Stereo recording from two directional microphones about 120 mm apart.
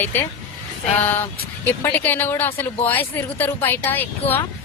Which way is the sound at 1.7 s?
15° left (ahead or behind).